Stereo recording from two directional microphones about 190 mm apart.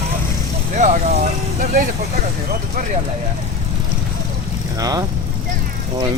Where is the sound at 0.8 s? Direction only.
40° right (ahead or behind).